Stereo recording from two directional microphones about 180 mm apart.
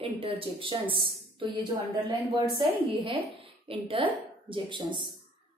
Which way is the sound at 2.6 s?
30° right (ahead or behind).